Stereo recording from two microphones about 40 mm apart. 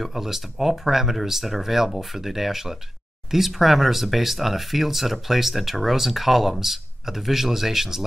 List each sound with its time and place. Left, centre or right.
0.0 s speech: centre